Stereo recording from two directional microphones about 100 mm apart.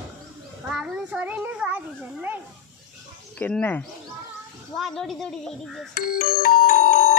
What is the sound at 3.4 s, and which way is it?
Speech, 20° left (ahead or behind).